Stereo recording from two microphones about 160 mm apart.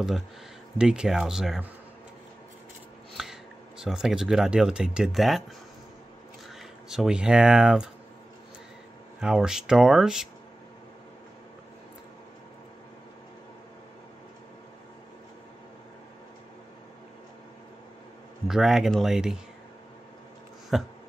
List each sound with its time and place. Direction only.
0.7 s speech: 5° right (ahead or behind)
3.2 s a sound: 5° right (ahead or behind)
3.8 s speech: 5° right (ahead or behind)
6.9 s speech: 5° right (ahead or behind)
9.2 s speech: 5° right (ahead or behind)
18.5 s speech: 5° right (ahead or behind)
20.7 s speech: centre (ahead or behind)